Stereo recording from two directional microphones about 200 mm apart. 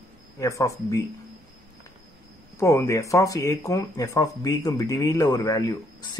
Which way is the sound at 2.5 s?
15° left (ahead or behind).